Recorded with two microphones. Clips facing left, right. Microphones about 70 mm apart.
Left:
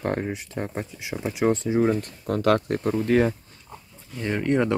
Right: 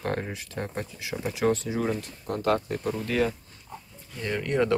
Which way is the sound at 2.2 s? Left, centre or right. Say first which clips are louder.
Left 4 dB; left.